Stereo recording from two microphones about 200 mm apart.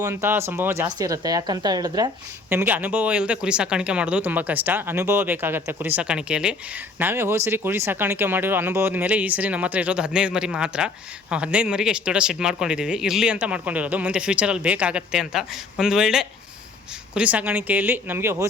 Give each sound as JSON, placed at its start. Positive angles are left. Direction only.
{"t": 0.0, "sound": "speech", "side_deg": -10}